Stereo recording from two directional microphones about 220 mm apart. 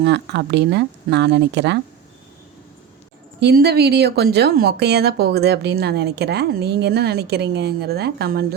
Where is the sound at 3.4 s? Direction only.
50° right (ahead or behind).